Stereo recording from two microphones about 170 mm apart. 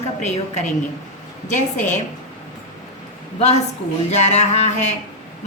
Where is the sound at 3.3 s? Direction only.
40° left (ahead or behind).